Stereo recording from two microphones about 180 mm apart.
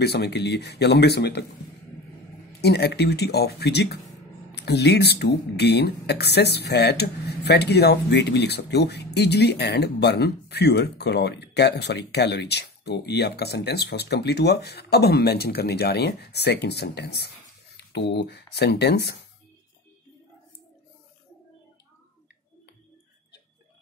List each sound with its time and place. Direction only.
0.0 s speech: 65° left (ahead or behind)
2.6 s speech: 65° left (ahead or behind)